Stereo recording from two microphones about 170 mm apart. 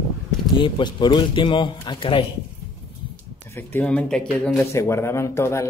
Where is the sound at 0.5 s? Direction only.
30° left (ahead or behind).